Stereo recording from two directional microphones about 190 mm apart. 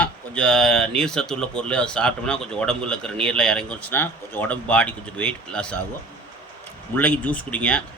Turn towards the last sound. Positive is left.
turn(degrees=5)  # may be behind; listen again after turning